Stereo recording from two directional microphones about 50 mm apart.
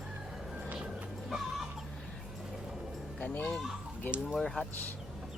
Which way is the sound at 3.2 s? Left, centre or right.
Left.